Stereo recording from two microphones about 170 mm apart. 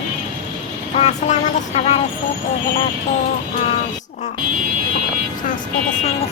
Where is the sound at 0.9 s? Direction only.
40° left (ahead or behind).